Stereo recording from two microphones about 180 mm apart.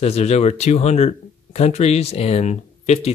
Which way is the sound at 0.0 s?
35° left (ahead or behind).